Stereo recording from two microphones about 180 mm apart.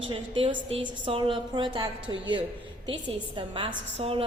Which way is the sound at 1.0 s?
30° right (ahead or behind).